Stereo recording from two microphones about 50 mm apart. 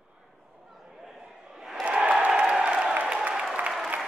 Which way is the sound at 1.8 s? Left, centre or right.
Right.